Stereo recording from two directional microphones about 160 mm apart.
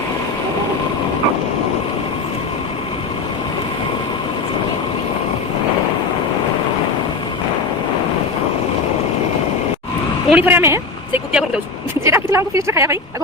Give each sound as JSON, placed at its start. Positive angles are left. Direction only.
{"t": 10.2, "sound": "speech", "side_deg": -10}
{"t": 11.3, "sound": "vehicle", "side_deg": -5}
{"t": 12.0, "sound": "speech", "side_deg": -15}